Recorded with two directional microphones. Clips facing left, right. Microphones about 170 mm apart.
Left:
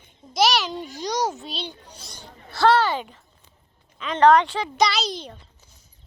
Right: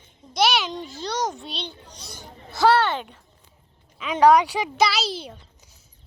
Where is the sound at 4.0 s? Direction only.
10° right (ahead or behind).